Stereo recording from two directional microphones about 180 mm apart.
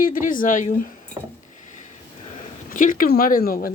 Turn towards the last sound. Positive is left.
turn(degrees=55)  # may be behind; listen again after turning